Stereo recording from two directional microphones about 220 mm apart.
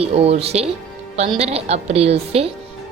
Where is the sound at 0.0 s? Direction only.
25° right (ahead or behind).